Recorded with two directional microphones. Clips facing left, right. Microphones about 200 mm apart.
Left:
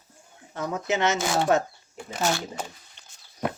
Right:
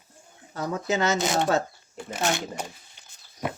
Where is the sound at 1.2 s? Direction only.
20° right (ahead or behind).